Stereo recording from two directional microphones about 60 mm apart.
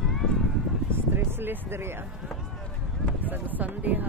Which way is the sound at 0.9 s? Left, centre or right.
Right.